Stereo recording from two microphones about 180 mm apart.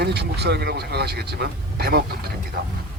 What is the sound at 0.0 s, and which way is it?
Speech, 65° right (ahead or behind).